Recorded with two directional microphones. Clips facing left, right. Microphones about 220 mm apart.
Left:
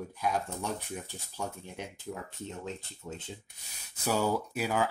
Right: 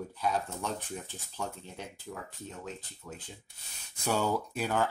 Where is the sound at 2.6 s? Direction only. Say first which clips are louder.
Left 3 dB; 25° left (ahead or behind).